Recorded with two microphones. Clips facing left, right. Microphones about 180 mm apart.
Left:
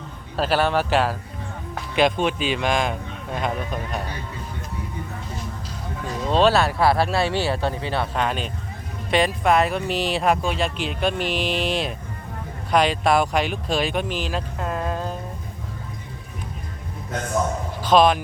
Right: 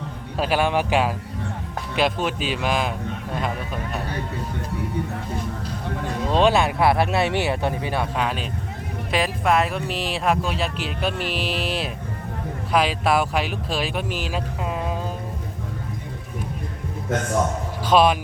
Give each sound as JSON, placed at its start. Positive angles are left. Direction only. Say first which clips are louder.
{"t": 0.3, "sound": "speech", "louder": "left 1 dB", "side_deg": -10}
{"t": 3.3, "sound": "a sound", "louder": "left 3 dB", "side_deg": 0}
{"t": 6.3, "sound": "speech", "louder": "left 1 dB", "side_deg": -15}
{"t": 17.8, "sound": "speech", "louder": "left 1 dB", "side_deg": -10}